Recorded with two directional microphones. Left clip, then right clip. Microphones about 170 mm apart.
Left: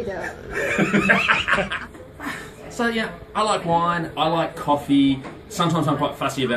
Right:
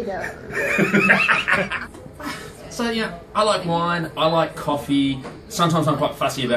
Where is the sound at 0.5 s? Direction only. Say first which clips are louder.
Right 2 dB; 15° right (ahead or behind).